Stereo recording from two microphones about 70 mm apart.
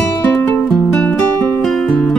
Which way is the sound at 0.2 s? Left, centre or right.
Left.